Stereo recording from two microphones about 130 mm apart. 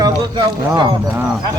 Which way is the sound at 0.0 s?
35° right (ahead or behind).